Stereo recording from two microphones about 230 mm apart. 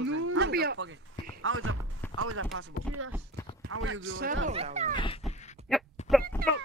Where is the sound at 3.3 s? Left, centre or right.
Right.